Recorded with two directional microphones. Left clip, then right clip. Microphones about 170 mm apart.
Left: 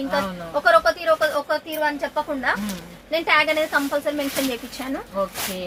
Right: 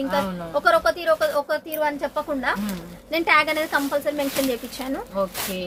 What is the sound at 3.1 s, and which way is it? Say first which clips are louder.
A woman's voice: even; 30° right (ahead or behind).